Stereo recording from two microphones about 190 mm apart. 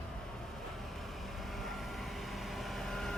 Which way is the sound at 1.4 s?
Centre (ahead or behind).